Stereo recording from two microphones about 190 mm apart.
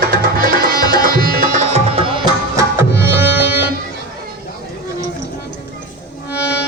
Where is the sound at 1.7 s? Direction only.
30° right (ahead or behind).